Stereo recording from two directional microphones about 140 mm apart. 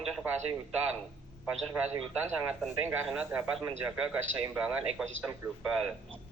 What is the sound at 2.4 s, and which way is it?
A man's voice, 10° right (ahead or behind).